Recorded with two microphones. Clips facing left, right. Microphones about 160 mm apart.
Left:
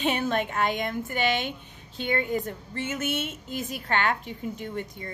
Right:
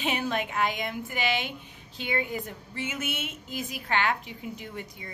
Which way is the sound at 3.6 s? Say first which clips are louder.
Left 1 dB; 45° left (ahead or behind).